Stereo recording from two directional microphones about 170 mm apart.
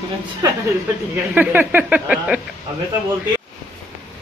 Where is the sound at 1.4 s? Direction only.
10° right (ahead or behind).